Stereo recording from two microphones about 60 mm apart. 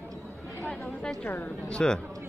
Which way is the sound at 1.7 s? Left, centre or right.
Centre.